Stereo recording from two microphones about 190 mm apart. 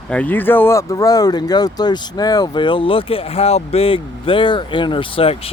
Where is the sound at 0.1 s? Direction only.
10° left (ahead or behind).